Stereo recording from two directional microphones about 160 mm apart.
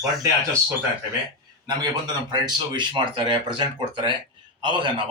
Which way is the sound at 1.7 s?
25° right (ahead or behind).